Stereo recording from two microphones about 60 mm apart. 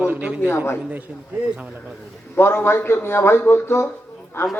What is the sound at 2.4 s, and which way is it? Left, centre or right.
A man's voice, left.